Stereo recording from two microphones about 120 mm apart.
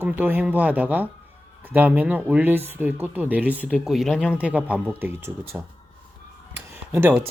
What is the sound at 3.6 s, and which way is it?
Mantra, centre (ahead or behind).